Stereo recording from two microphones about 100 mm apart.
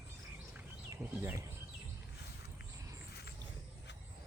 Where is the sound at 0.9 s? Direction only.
30° right (ahead or behind).